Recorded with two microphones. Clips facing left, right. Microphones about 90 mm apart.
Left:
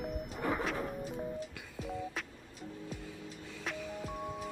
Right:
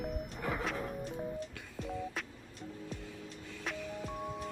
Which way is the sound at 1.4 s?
5° left (ahead or behind).